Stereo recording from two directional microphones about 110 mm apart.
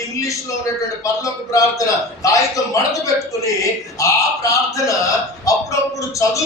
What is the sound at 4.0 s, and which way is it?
Speech, 30° left (ahead or behind).